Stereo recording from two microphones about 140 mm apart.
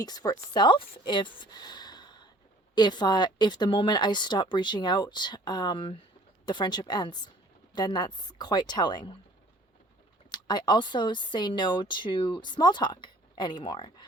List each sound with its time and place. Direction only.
0.0 s a woman's voice: 25° left (ahead or behind)
10.3 s speech: 30° left (ahead or behind)